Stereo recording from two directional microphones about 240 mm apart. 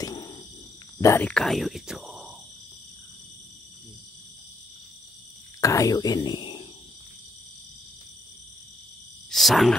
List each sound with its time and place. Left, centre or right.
0.0 s a sound: centre
1.0 s speech: centre
5.6 s speech: centre
9.3 s speech: centre